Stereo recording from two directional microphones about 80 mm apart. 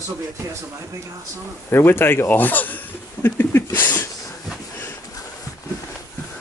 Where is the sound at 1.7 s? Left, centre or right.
Left.